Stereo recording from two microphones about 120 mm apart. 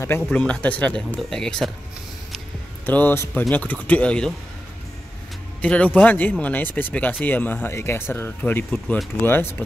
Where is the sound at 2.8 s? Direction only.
15° left (ahead or behind).